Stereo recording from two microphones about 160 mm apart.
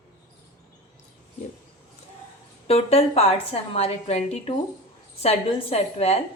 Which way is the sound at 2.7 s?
40° left (ahead or behind).